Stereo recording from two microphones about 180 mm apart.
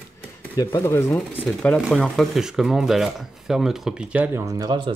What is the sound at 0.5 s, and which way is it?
Speech, 15° left (ahead or behind).